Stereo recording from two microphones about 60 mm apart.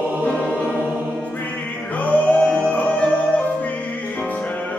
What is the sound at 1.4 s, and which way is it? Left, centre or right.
Music, left.